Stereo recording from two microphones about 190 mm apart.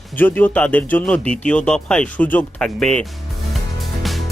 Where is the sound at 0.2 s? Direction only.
10° left (ahead or behind).